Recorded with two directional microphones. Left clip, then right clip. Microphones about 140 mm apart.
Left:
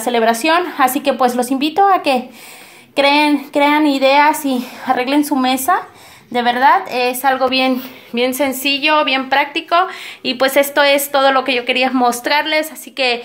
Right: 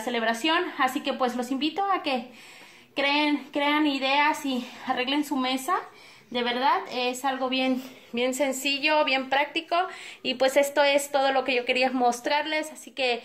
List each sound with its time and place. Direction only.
0.0 s a woman's voice: 50° left (ahead or behind); by 7.7 s 25° left (ahead or behind)
8.1 s a woman's voice: centre (ahead or behind)